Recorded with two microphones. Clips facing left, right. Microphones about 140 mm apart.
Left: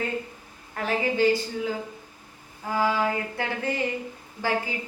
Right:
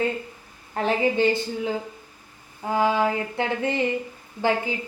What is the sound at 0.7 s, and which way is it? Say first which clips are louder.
Speech: right 4 dB; 25° right (ahead or behind).